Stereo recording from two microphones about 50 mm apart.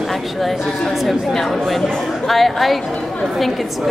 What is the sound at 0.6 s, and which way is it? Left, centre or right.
Speech, centre.